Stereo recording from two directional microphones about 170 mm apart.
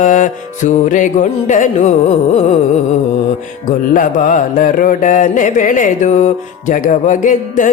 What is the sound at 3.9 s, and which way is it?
Music, 50° left (ahead or behind).